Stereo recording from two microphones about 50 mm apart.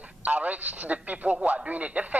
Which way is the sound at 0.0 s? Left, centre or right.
Right.